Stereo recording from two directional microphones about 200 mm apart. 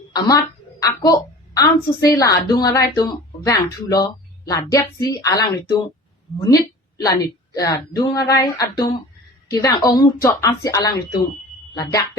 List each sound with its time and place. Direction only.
0.1 s a woman's voice: 20° left (ahead or behind)